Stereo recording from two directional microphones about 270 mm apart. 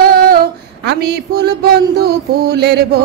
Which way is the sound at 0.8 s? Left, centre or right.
Right.